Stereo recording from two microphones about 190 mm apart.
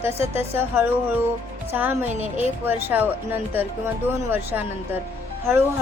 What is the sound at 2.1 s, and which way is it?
Speech, 35° right (ahead or behind).